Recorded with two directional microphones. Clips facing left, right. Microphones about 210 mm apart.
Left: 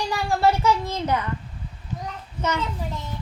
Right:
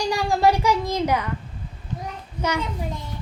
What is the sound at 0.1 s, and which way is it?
A child's voice, 15° right (ahead or behind).